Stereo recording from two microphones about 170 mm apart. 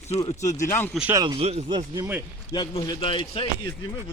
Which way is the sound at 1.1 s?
20° right (ahead or behind).